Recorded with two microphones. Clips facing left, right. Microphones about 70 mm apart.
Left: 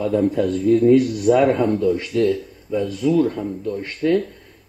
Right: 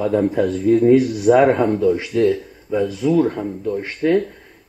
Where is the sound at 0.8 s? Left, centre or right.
Centre.